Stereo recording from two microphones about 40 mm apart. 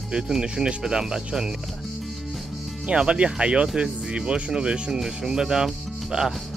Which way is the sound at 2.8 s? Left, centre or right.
Right.